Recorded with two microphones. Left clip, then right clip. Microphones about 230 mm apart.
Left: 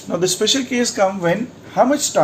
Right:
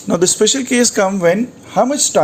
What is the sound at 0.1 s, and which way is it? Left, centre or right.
Speech, right.